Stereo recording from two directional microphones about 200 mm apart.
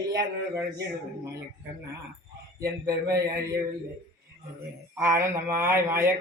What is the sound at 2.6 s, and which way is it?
Speech, 15° right (ahead or behind).